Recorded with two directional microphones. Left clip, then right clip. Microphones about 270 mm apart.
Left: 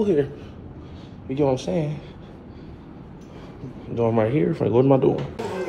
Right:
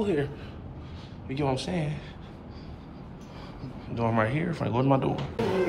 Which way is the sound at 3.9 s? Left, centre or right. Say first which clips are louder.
Left 6 dB; centre.